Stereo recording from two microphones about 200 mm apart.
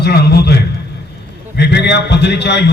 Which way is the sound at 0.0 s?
55° left (ahead or behind).